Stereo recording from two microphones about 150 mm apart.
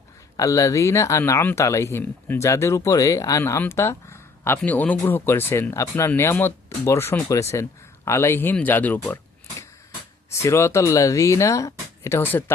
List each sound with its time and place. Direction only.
0.3 s speech: 20° left (ahead or behind)
10.2 s speech: 20° left (ahead or behind)